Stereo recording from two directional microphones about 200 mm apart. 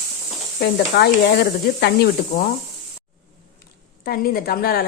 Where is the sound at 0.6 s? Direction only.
55° left (ahead or behind).